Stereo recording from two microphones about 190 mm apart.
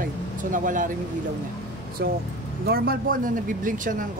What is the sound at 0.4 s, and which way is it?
Speech, 45° right (ahead or behind).